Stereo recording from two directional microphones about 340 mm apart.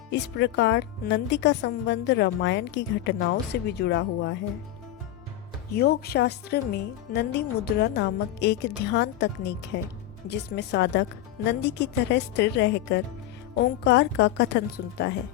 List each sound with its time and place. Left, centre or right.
0.1 s speech: left
5.7 s speech: left